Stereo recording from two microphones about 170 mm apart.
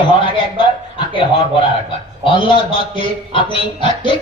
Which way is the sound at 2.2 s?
30° left (ahead or behind).